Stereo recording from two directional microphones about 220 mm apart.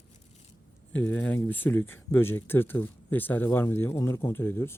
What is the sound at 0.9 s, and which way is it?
Speech, 10° left (ahead or behind).